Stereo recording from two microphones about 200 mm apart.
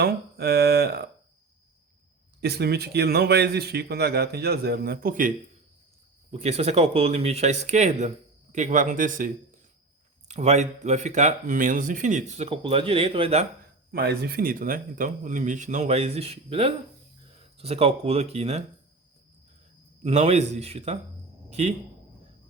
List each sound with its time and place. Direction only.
0.0 s speech: 50° right (ahead or behind)
2.4 s speech: 55° right (ahead or behind)
6.3 s speech: 30° right (ahead or behind)
13.9 s speech: 50° right (ahead or behind); by 18.6 s 30° right (ahead or behind)
20.1 s speech: 30° right (ahead or behind)